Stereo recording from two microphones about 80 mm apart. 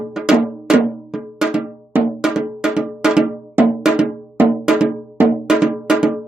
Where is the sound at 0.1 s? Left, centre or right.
Centre.